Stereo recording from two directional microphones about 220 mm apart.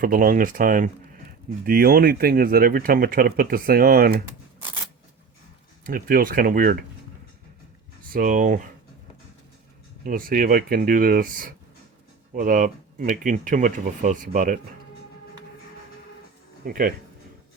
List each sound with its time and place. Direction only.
0.0 s speech: 40° right (ahead or behind)
5.8 s speech: 40° right (ahead or behind)
8.1 s speech: 40° right (ahead or behind)
10.0 s speech: 40° right (ahead or behind)
16.6 s speech: 40° right (ahead or behind)